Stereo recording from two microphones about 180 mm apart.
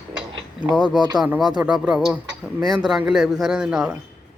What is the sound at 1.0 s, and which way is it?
Speech, 25° right (ahead or behind).